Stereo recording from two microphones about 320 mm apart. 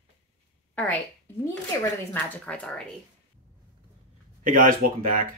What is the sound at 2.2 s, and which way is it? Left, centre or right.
Speech, centre.